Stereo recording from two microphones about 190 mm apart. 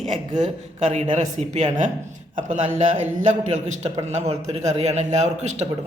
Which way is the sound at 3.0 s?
40° right (ahead or behind).